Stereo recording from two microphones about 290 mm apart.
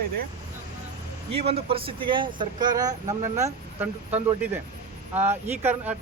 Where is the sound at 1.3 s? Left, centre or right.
Centre.